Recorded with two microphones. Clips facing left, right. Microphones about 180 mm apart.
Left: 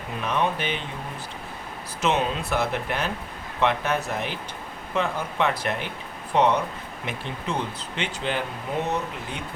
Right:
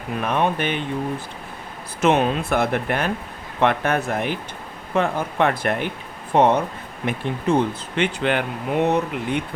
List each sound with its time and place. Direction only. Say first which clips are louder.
0.2 s speech: right 4 dB; 55° right (ahead or behind)
2.0 s speech: right 6 dB; 55° right (ahead or behind)